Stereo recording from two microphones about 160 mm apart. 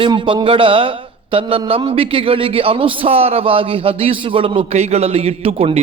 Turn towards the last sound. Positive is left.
turn(degrees=-35)  # may be behind; listen again after turning